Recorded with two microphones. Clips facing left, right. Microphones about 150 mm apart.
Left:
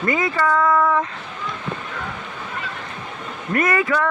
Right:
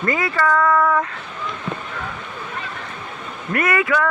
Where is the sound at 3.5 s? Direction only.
30° left (ahead or behind).